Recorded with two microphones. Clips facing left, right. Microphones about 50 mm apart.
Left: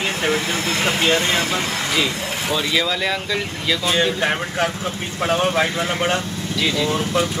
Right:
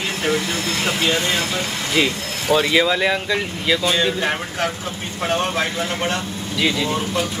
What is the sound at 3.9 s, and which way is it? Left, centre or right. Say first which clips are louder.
Speech: left 1 dB; centre.